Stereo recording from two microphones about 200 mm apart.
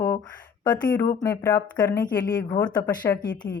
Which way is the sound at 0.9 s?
15° left (ahead or behind).